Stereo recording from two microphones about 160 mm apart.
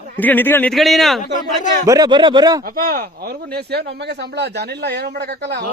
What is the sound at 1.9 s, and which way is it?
Speech, 25° right (ahead or behind).